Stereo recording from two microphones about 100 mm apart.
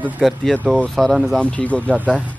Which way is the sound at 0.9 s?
Centre (ahead or behind).